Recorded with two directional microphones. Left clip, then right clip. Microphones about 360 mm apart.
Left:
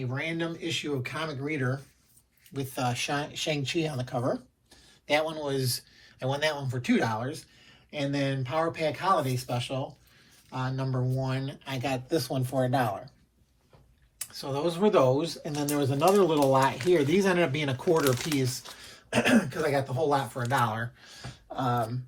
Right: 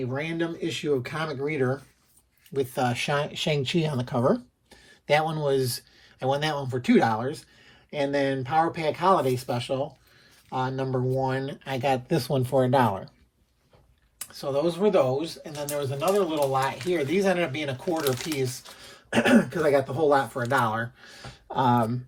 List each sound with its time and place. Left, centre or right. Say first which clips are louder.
0.1 s speech: right 3 dB; centre
14.2 s speech: right 5 dB; centre
17.9 s speech: left 2 dB; centre
18.3 s speech: right 1 dB; centre